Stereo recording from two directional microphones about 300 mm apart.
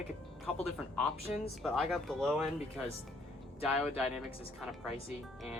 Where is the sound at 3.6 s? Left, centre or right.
Centre.